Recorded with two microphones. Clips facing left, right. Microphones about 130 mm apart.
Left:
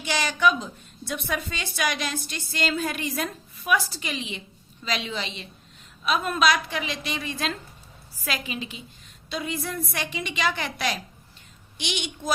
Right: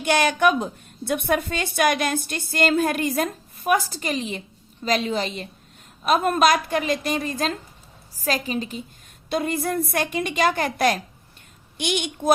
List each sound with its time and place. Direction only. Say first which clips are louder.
0.0 s a woman's voice: right 4 dB; 55° right (ahead or behind)
9.3 s a woman's voice: right 7 dB; 50° right (ahead or behind)